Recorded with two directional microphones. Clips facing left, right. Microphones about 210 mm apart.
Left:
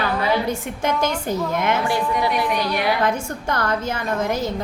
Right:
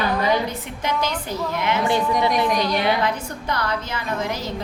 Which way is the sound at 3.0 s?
50° left (ahead or behind).